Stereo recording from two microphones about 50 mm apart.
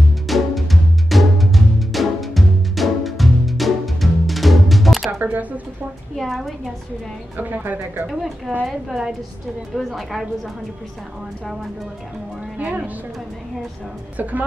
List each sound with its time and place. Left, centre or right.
0.3 s music: centre
5.2 s speech: right
6.1 s a woman's voice: centre
7.3 s speech: right
8.1 s a woman's voice: centre
12.5 s speech: right
14.1 s speech: right